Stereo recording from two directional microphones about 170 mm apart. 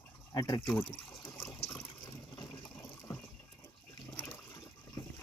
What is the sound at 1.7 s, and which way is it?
Water, 25° left (ahead or behind).